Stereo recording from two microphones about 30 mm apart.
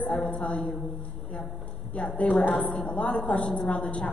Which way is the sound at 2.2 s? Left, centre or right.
Left.